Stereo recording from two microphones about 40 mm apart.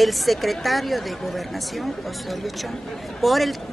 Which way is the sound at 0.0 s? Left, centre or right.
Centre.